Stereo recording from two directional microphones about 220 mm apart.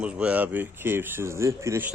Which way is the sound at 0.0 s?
5° right (ahead or behind).